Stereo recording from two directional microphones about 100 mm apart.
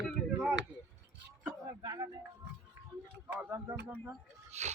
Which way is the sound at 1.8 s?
40° right (ahead or behind).